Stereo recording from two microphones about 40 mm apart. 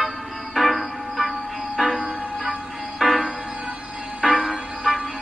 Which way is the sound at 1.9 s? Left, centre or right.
Centre.